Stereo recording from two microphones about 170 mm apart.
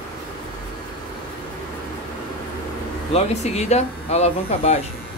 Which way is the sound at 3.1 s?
40° left (ahead or behind).